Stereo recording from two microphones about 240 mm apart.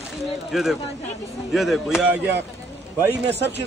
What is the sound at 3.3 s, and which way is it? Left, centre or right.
Speech, right.